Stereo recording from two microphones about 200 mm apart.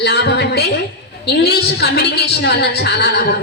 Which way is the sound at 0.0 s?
55° left (ahead or behind).